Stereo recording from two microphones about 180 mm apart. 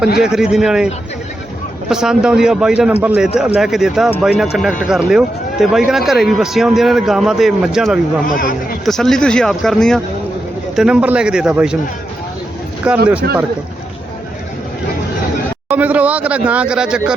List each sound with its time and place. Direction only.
0.2 s speech: 5° right (ahead or behind)
1.9 s speech: 5° right (ahead or behind)
8.3 s speech: 50° left (ahead or behind)
8.8 s speech: centre (ahead or behind)
12.9 s speech: 5° right (ahead or behind)
13.2 s speech: 60° right (ahead or behind)
15.7 s speech: 10° right (ahead or behind)